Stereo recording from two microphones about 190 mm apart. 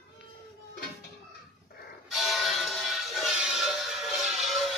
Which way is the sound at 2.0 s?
Centre (ahead or behind).